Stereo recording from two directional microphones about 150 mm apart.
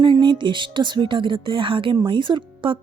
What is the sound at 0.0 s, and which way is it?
Speech, 30° right (ahead or behind).